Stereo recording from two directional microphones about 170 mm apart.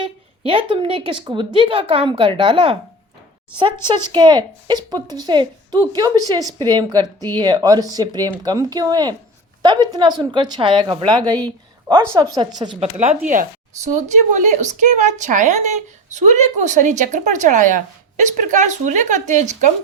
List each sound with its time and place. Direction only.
0.0 s a woman's voice: 30° right (ahead or behind)
3.8 s a woman's voice: 25° right (ahead or behind)
11.4 s a sound: 30° right (ahead or behind)
12.1 s a woman's voice: 20° right (ahead or behind)
12.8 s a woman's voice: 40° right (ahead or behind)